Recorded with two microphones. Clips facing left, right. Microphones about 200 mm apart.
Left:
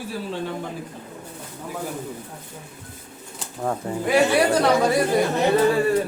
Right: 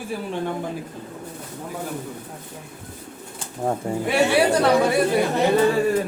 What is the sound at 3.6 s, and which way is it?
Speech, 25° right (ahead or behind).